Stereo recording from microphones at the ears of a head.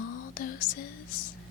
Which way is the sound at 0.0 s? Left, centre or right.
Left.